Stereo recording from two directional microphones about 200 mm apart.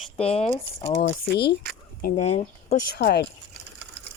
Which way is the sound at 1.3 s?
55° left (ahead or behind).